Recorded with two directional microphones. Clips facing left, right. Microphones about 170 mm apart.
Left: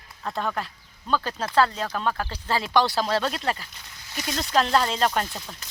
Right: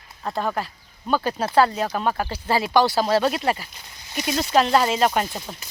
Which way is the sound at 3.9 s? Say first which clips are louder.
Right 6 dB; 20° right (ahead or behind).